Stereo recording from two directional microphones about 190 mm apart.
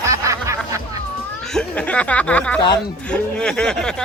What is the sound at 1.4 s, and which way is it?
Speech, 5° left (ahead or behind).